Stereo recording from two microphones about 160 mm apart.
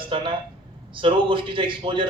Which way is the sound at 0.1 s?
30° right (ahead or behind).